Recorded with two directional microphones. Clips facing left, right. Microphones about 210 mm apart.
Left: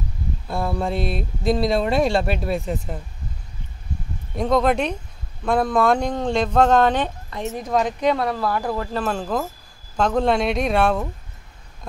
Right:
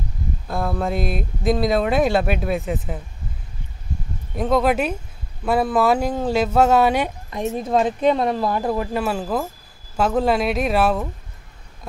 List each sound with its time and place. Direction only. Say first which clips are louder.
0.5 s speech: right 1 dB; centre (ahead or behind)
4.4 s speech: even; 5° right (ahead or behind)